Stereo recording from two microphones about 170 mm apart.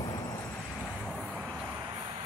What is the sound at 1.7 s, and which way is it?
Vehicle, 15° right (ahead or behind).